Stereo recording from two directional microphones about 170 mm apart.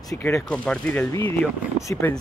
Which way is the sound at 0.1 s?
20° left (ahead or behind).